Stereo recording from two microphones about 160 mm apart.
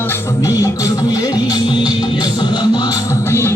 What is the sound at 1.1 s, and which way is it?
Music, 25° left (ahead or behind).